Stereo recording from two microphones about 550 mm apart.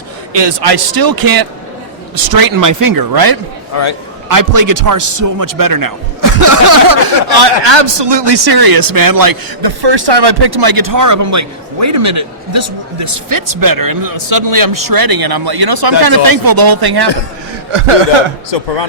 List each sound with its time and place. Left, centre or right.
0.3 s speech: right
17.7 s speech: right